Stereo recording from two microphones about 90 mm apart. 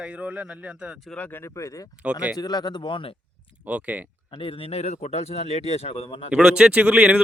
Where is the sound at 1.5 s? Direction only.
35° left (ahead or behind).